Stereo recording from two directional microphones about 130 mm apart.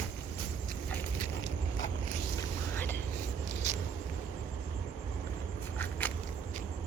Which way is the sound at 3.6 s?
60° right (ahead or behind).